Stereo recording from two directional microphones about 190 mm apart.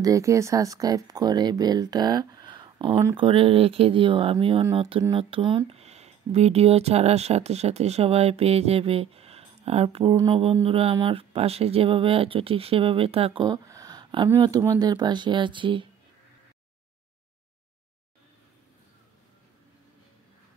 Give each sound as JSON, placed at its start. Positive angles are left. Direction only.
{"t": 0.0, "sound": "speech", "side_deg": -15}
{"t": 3.3, "sound": "speech", "side_deg": -30}